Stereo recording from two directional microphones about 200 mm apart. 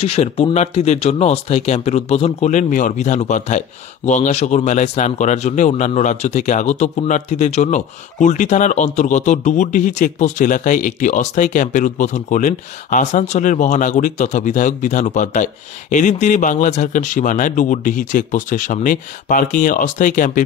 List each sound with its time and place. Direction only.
0.0 s speech: 30° left (ahead or behind)